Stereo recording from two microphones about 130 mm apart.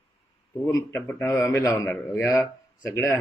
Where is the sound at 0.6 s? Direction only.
20° left (ahead or behind).